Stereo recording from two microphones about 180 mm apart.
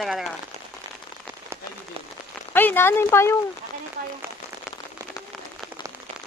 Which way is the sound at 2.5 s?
10° left (ahead or behind).